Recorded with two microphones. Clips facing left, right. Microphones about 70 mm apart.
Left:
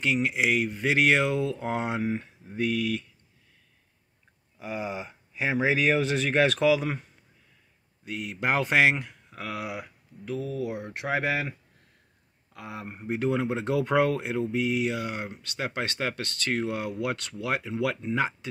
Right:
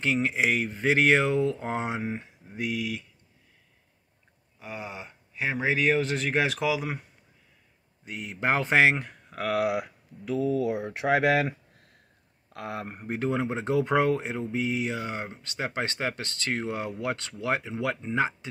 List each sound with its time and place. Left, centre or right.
0.0 s speech: right; by 3.1 s centre
4.6 s speech: centre
8.1 s speech: right
9.3 s speech: right
11.1 s speech: right
12.5 s speech: right
13.1 s speech: right